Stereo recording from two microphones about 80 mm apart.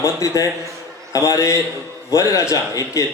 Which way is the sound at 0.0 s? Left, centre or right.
Left.